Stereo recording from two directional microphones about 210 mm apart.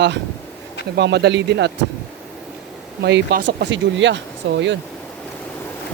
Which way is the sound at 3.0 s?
55° right (ahead or behind).